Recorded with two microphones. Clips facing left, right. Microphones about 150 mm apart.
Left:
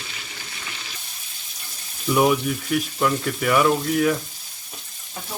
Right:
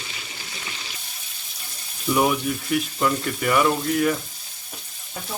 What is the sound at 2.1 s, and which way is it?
Speech, centre (ahead or behind).